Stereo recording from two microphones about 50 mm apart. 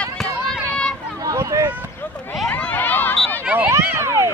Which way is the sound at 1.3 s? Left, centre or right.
Right.